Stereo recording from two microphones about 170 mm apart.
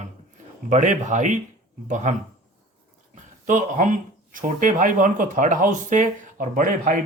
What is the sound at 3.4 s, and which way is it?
Speech, 50° right (ahead or behind).